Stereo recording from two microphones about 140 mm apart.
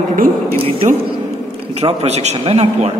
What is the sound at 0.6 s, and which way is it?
A man's voice, 40° right (ahead or behind).